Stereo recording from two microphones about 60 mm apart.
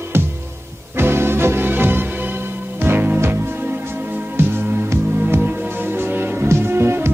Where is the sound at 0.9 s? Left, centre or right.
Right.